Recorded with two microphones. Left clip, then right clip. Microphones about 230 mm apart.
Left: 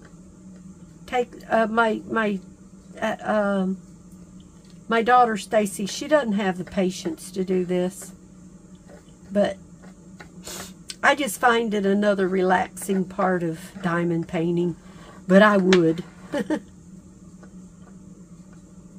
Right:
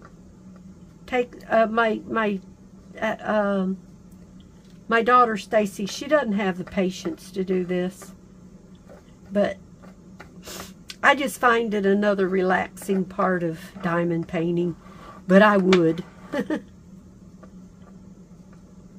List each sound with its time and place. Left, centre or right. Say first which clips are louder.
1.0 s speech: even; centre
4.8 s speech: even; centre
9.3 s speech: left 1 dB; centre